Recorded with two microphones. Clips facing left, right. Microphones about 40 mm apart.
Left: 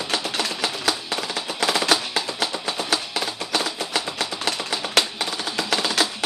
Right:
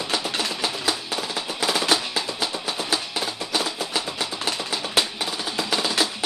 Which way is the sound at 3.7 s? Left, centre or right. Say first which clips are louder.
Left 1 dB; left.